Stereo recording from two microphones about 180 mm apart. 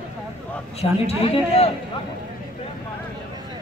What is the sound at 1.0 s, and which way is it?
Speech, 35° left (ahead or behind).